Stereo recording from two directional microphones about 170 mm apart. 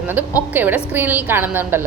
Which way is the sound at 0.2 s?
10° right (ahead or behind).